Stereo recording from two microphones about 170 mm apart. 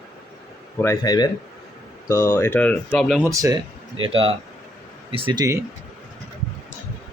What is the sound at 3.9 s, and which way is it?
Speech, 35° right (ahead or behind).